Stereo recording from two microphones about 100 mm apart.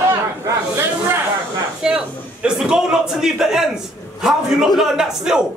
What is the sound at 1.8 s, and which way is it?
A man's voice, 10° right (ahead or behind).